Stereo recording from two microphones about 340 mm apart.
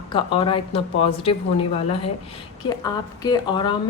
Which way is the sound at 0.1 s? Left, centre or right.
Centre.